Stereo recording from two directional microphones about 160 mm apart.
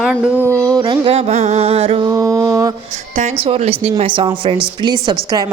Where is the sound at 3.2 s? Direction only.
40° right (ahead or behind).